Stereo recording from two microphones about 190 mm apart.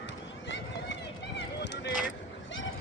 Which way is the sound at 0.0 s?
70° left (ahead or behind).